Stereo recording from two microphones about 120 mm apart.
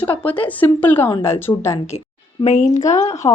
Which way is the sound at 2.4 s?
70° left (ahead or behind).